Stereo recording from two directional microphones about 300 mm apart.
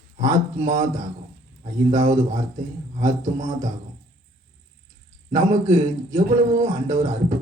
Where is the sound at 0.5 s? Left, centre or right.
Right.